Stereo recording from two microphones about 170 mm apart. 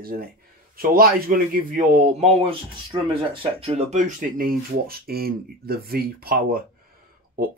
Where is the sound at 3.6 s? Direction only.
40° right (ahead or behind).